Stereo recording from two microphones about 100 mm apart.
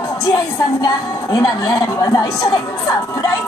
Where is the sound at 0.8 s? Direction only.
45° left (ahead or behind).